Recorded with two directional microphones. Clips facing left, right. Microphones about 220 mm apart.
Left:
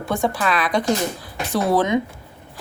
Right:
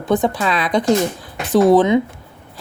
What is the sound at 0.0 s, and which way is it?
Speech, 20° right (ahead or behind).